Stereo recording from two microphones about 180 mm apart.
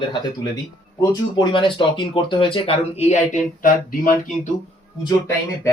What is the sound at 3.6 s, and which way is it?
Speech, 50° left (ahead or behind).